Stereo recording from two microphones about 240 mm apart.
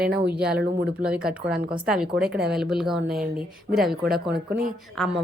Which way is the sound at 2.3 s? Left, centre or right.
Right.